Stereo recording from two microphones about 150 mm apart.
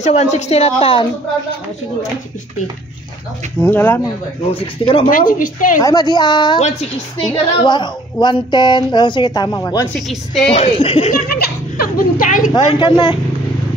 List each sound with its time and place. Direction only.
0.0 s a woman's voice: 50° left (ahead or behind)
3.6 s speech: 15° left (ahead or behind)
4.6 s speech: 35° left (ahead or behind)
5.1 s a woman's voice: 65° left (ahead or behind)
5.8 s a woman's voice: 25° left (ahead or behind)
9.9 s a woman's voice: centre (ahead or behind)
10.5 s a woman's voice: 40° left (ahead or behind)
11.2 s a sound: 90° left; by 12.4 s 65° left (ahead or behind)
12.5 s speech: 30° left (ahead or behind)